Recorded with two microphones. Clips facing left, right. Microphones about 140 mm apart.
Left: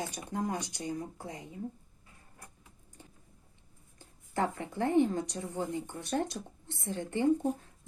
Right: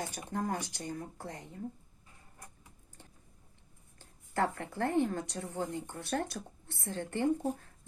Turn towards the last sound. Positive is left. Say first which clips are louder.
# left 2 dB
turn(degrees=15)  # may be behind; listen again after turning